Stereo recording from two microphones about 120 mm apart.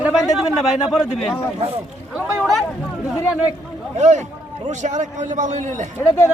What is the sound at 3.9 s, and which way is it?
A man's voice, 80° right.